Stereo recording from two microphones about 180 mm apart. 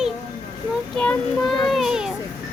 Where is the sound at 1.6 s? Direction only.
Centre (ahead or behind).